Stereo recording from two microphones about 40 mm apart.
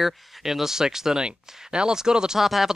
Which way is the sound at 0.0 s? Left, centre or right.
Centre.